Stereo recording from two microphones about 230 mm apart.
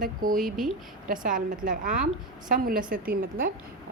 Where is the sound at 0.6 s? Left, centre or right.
Right.